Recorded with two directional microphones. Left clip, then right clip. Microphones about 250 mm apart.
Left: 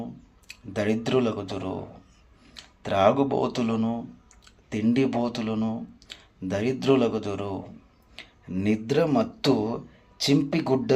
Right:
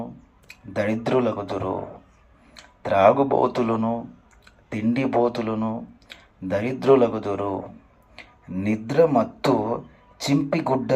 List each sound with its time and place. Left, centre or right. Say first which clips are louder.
0.7 s speech: right 3 dB; right
8.1 s a sound: right 1 dB; right
8.9 s speech: right 6 dB; right